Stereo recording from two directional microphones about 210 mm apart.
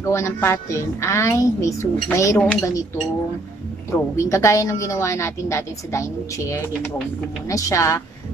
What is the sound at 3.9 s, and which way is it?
A woman's voice, 15° left (ahead or behind).